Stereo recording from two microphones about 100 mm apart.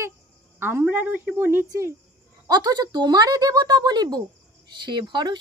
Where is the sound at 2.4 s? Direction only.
40° right (ahead or behind).